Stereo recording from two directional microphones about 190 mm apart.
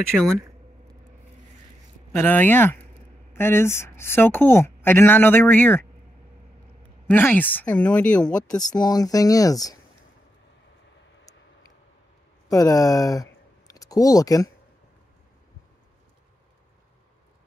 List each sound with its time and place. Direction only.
2.1 s a woman's voice: 10° left (ahead or behind)
7.1 s a woman's voice: 10° left (ahead or behind)
8.5 s speech: 20° left (ahead or behind)
12.4 s speech: 20° left (ahead or behind)